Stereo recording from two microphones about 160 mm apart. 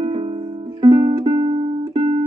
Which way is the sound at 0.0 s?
35° right (ahead or behind).